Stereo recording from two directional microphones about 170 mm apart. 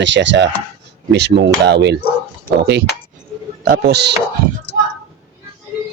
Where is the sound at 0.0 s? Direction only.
90° right.